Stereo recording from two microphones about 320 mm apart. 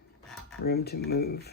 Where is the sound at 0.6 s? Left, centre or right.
Left.